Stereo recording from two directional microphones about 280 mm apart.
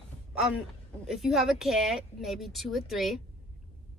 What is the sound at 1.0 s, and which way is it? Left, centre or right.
Speech, centre.